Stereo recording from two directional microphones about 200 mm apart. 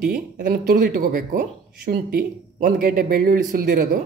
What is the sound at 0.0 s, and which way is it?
A man's voice, 45° right (ahead or behind).